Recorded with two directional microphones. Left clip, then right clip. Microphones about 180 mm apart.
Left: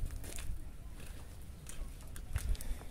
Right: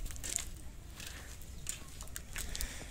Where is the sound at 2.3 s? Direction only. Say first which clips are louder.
Right 7 dB; 60° left (ahead or behind).